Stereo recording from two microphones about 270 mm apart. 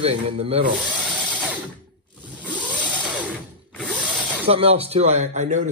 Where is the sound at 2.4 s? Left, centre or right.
Centre.